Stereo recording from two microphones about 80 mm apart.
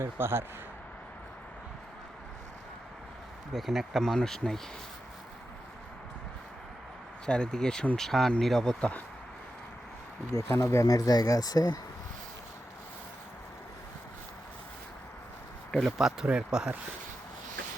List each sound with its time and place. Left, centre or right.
0.0 s speech: right
3.5 s speech: centre
7.3 s speech: centre
10.5 s speech: left
16.0 s speech: centre